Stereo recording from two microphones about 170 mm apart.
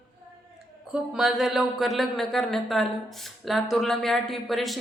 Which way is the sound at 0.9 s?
5° right (ahead or behind).